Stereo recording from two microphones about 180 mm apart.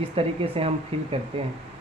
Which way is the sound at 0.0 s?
30° right (ahead or behind).